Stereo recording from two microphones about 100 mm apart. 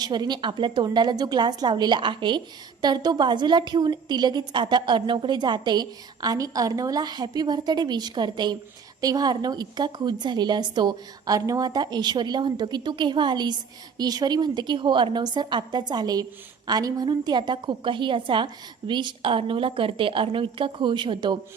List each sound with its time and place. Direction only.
0.0 s a woman's voice: 45° right (ahead or behind)
0.9 s a woman's voice: 45° right (ahead or behind)